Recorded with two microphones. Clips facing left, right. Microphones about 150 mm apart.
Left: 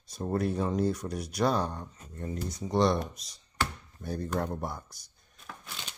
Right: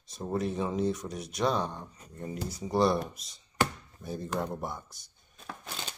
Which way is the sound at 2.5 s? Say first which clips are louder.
Even; 5° right (ahead or behind).